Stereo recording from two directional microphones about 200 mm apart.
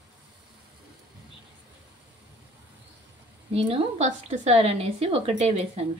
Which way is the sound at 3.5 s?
30° right (ahead or behind).